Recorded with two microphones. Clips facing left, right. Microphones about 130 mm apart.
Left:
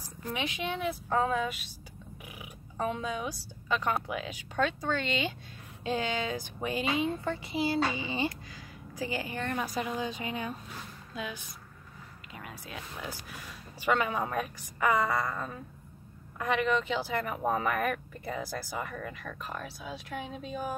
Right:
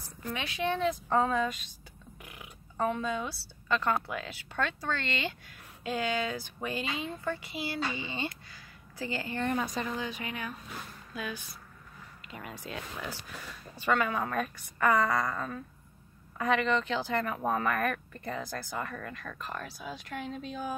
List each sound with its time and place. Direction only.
0.3 s speech: 15° left (ahead or behind)
2.2 s a sound: 10° left (ahead or behind)
4.1 s speech: 15° left (ahead or behind)
12.3 s speech: 5° left (ahead or behind)